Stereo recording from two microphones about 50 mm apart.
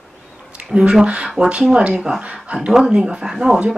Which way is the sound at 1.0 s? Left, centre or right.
Right.